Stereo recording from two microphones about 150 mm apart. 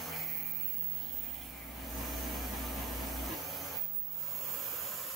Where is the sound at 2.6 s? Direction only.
Centre (ahead or behind).